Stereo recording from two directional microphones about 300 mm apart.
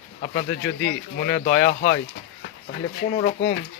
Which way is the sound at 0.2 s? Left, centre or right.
Left.